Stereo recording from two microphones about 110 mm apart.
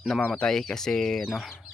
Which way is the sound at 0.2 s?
5° left (ahead or behind).